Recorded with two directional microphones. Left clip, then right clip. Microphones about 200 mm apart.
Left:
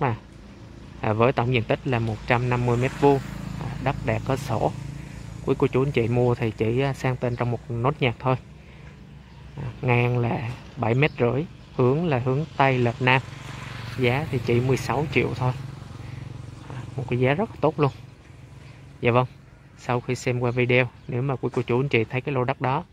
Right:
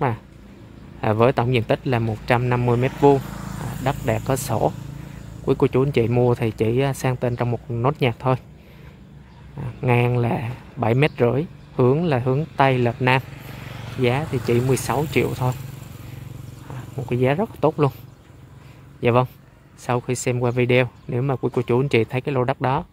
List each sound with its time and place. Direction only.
1.0 s speech: 5° right (ahead or behind)
9.6 s speech: 5° right (ahead or behind)
13.3 s vehicle: 50° right (ahead or behind)
14.0 s speech: 5° right (ahead or behind)
16.7 s speech: centre (ahead or behind)
18.9 s a man's voice: 5° right (ahead or behind)